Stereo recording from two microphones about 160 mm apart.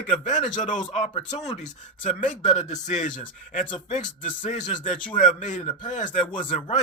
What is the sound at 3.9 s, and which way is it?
A man's voice, 50° left (ahead or behind).